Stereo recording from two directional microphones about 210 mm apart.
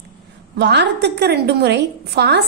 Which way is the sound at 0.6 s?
55° right (ahead or behind).